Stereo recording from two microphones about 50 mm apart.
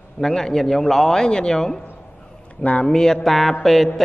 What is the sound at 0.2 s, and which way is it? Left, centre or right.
A man's voice, centre.